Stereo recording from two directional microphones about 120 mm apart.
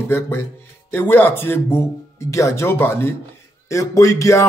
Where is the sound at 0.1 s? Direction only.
20° left (ahead or behind).